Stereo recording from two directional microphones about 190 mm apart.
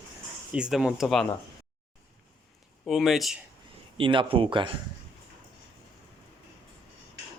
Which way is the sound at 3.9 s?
25° right (ahead or behind).